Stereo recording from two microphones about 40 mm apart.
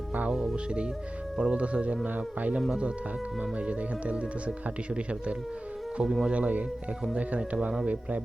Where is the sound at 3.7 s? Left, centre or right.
Right.